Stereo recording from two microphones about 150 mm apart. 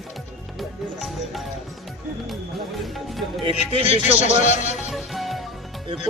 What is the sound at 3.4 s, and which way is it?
Speech, 35° right (ahead or behind).